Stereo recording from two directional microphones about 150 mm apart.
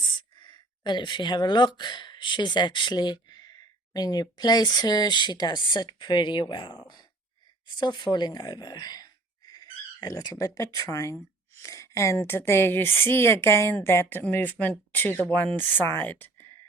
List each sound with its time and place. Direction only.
0.2 s a woman's voice: 30° left (ahead or behind); by 16.5 s 10° left (ahead or behind)